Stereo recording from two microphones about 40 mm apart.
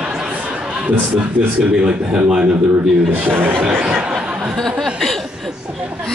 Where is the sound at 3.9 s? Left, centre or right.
Right.